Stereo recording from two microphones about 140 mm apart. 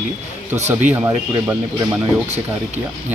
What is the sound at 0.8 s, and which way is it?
Speech, 15° right (ahead or behind).